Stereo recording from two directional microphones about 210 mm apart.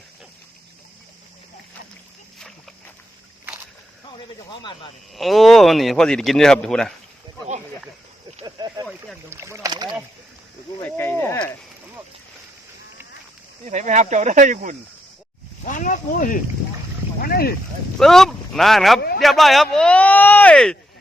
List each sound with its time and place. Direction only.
5.1 s speech: centre (ahead or behind)
8.4 s a sound: 20° right (ahead or behind)
9.3 s speech: 15° right (ahead or behind)
10.9 s speech: 10° left (ahead or behind)
13.7 s speech: 35° right (ahead or behind)
15.6 s speech: 40° left (ahead or behind)
17.9 s speech: centre (ahead or behind)
18.9 s speech: 50° left (ahead or behind)
19.2 s speech: centre (ahead or behind)